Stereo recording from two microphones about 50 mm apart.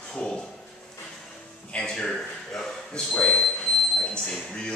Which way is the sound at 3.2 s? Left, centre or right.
Left.